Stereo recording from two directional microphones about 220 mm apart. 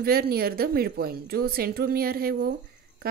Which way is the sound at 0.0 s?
45° right (ahead or behind).